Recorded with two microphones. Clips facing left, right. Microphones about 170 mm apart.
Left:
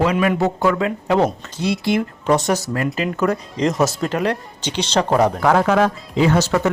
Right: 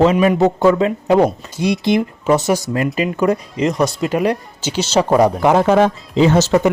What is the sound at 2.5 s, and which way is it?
Speech, 20° right (ahead or behind).